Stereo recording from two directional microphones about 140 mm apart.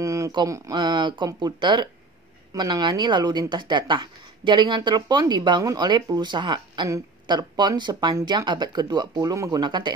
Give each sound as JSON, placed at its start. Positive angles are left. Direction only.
{"t": 0.0, "sound": "speech", "side_deg": -25}